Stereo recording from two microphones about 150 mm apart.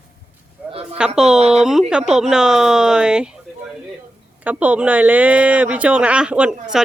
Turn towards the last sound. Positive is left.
turn(degrees=-5)  # may be behind; listen again after turning